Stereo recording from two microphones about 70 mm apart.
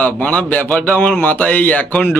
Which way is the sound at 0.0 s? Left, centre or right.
Left.